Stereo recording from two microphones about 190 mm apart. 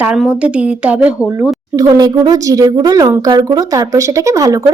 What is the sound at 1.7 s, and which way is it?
Speech, 20° right (ahead or behind).